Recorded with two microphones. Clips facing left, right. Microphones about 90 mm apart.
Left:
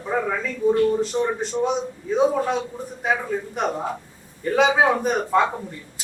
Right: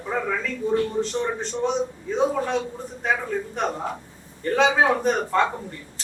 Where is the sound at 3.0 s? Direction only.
5° left (ahead or behind).